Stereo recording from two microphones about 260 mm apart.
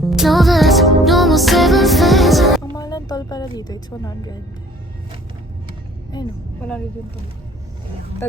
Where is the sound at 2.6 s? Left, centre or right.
Centre.